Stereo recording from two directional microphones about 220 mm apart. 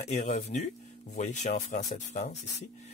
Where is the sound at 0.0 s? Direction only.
30° left (ahead or behind).